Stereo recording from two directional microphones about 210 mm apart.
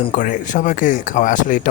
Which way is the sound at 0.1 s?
35° left (ahead or behind).